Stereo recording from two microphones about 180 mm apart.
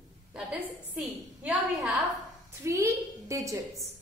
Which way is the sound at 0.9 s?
10° right (ahead or behind).